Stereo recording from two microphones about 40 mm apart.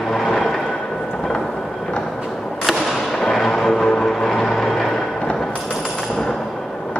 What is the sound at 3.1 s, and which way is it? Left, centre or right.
Vehicle, centre.